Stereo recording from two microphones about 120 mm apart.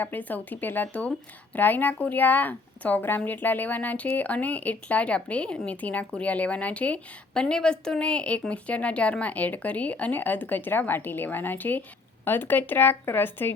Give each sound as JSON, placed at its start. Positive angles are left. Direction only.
{"t": 0.0, "sound": "speech", "side_deg": 15}